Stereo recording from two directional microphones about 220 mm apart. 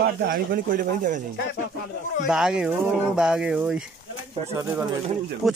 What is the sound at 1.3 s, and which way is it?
Speech, 50° left (ahead or behind).